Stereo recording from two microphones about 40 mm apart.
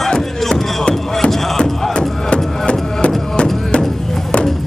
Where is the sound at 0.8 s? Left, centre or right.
Left.